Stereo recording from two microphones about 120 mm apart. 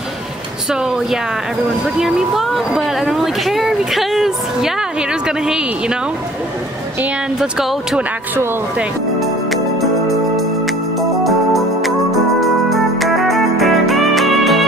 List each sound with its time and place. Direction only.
0.7 s speech: 5° right (ahead or behind)
7.3 s speech: 5° right (ahead or behind)
9.2 s music: centre (ahead or behind)
11.0 s organ: centre (ahead or behind)